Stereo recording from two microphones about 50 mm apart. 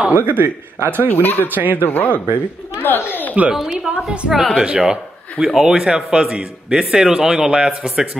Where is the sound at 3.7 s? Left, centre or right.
Centre.